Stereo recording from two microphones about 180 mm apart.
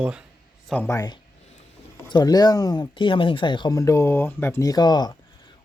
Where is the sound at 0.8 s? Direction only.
20° left (ahead or behind).